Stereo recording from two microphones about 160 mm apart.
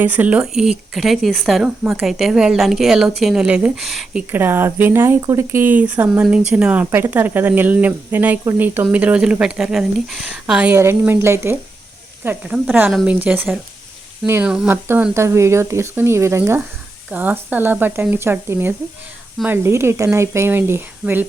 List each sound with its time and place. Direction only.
0.0 s speech: 10° right (ahead or behind)
4.3 s speech: 15° right (ahead or behind)
13.1 s speech: 10° right (ahead or behind)